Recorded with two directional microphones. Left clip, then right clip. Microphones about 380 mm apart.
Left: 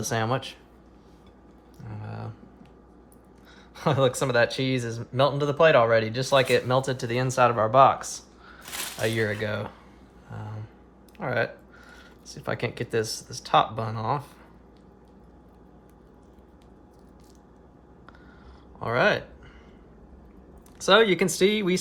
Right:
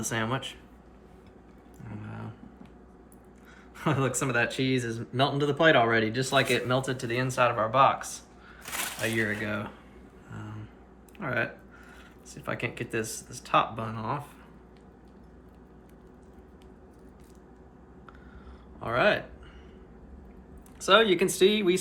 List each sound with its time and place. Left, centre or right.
0.0 s speech: left
1.8 s a sound: left
3.8 s speech: left
11.2 s speech: left
18.8 s speech: left
20.7 s speech: left